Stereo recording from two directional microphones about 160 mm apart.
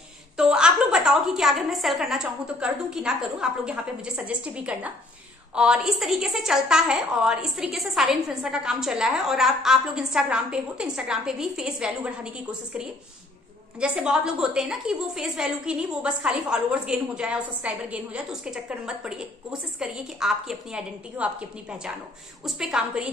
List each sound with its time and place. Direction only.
0.4 s a woman's voice: 5° right (ahead or behind)